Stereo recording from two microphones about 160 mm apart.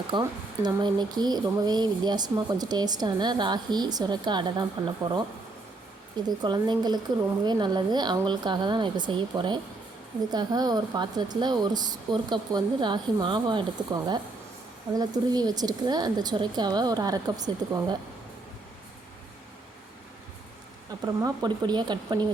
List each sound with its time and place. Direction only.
0.1 s speech: 30° right (ahead or behind)
6.2 s speech: 25° right (ahead or behind)
21.0 s speech: 25° right (ahead or behind)